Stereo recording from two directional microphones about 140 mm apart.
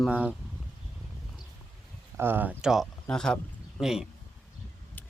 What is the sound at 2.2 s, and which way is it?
Speech, 15° right (ahead or behind).